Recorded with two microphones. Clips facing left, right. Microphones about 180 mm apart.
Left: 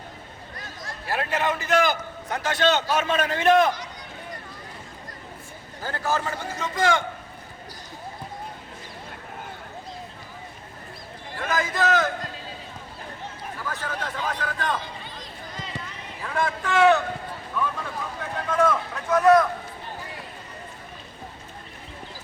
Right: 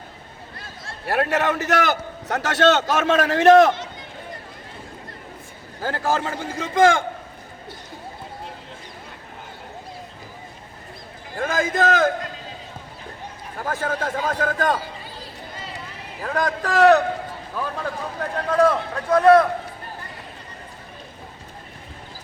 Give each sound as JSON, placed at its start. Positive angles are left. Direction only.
{"t": 1.0, "sound": "a man's voice", "side_deg": -60}
{"t": 5.8, "sound": "a man's voice", "side_deg": -55}
{"t": 11.3, "sound": "a man's voice", "side_deg": -50}
{"t": 13.6, "sound": "a man's voice", "side_deg": -50}
{"t": 14.8, "sound": "run", "side_deg": -5}
{"t": 16.2, "sound": "speech", "side_deg": -40}
{"t": 18.4, "sound": "speech", "side_deg": -35}